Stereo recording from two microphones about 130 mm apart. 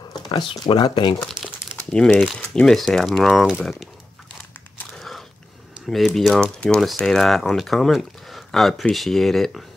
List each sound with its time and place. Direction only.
0.1 s speech: 35° left (ahead or behind)
1.8 s speech: 10° left (ahead or behind)
4.9 s biting: centre (ahead or behind)
5.9 s speech: centre (ahead or behind)